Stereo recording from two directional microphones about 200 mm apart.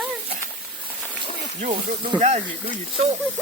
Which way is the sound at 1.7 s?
25° right (ahead or behind).